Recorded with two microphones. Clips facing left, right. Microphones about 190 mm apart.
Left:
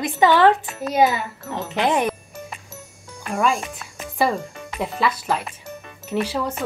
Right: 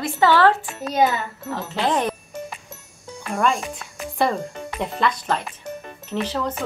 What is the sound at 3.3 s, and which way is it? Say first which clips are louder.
Speech: even; 5° left (ahead or behind).